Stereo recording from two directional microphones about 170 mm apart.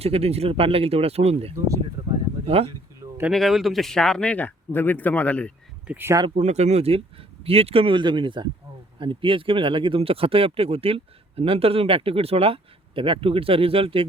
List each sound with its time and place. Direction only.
0.0 s speech: 35° right (ahead or behind)
2.5 s speech: 35° right (ahead or behind)
3.0 s a sound: 20° right (ahead or behind)
3.3 s speech: centre (ahead or behind)
5.9 s speech: 15° right (ahead or behind)
6.2 s speech: 40° right (ahead or behind)